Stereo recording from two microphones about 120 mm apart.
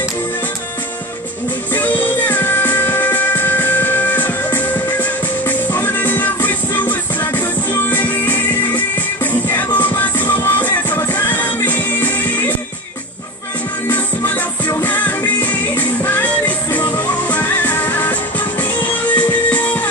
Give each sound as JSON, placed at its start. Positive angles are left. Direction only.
{"t": 1.7, "sound": "music", "side_deg": 15}
{"t": 13.8, "sound": "music", "side_deg": 15}
{"t": 19.1, "sound": "music", "side_deg": 15}